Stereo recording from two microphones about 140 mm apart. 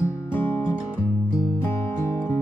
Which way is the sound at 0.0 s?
20° left (ahead or behind).